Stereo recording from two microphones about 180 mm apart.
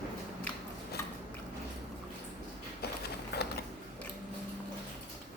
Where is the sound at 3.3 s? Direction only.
60° left (ahead or behind).